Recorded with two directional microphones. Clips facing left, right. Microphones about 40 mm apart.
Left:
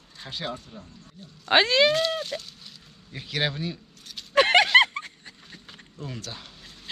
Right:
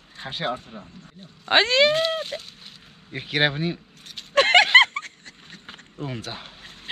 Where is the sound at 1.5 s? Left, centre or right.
Centre; by 4.2 s right.